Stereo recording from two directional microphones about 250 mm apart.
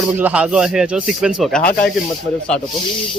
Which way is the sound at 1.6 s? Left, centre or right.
Left.